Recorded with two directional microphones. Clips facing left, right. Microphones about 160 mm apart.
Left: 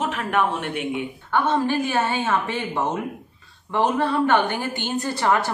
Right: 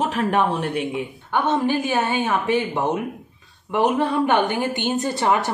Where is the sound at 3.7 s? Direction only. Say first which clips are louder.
Right 2 dB; 15° right (ahead or behind).